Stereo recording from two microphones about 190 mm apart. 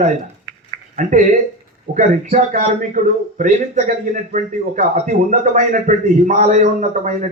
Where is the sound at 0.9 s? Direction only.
40° right (ahead or behind).